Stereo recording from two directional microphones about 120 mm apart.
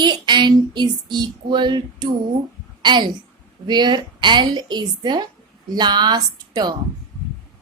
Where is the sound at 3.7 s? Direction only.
40° right (ahead or behind).